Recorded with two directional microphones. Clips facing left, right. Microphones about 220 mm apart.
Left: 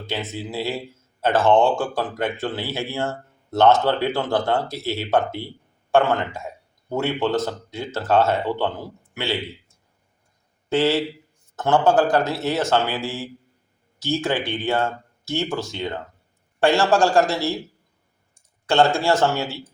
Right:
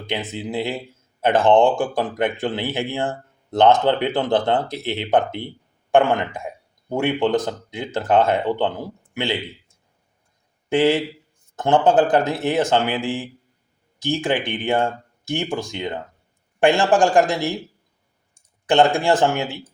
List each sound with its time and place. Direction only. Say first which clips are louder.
0.1 s a man's voice: right 3 dB; 15° right (ahead or behind)
18.6 s a man's voice: right 2 dB; 15° right (ahead or behind)